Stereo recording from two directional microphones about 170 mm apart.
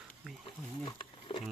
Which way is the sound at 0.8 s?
30° left (ahead or behind).